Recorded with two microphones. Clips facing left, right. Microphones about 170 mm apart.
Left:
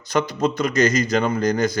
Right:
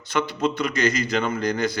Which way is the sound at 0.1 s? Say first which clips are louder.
Left 3 dB; 40° left (ahead or behind).